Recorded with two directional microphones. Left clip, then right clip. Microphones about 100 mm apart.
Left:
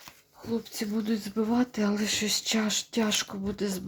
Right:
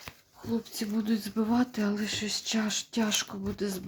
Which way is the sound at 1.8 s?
45° left (ahead or behind).